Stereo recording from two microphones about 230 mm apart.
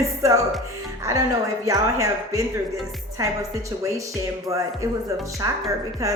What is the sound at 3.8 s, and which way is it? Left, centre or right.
A woman's voice, centre.